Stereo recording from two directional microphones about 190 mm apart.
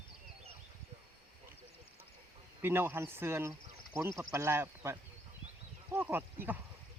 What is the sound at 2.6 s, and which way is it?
Speech, 10° right (ahead or behind).